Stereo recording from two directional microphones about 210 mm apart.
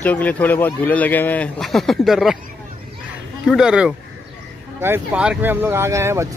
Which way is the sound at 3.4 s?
5° right (ahead or behind).